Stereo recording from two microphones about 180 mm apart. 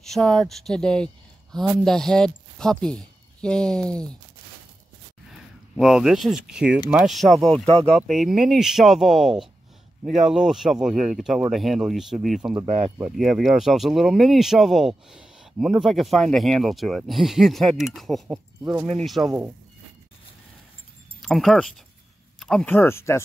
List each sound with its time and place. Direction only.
0.0 s speech: 5° left (ahead or behind)
5.8 s speech: 5° right (ahead or behind)
12.6 s speech: 40° right (ahead or behind)
13.1 s speech: centre (ahead or behind)
21.2 s speech: centre (ahead or behind)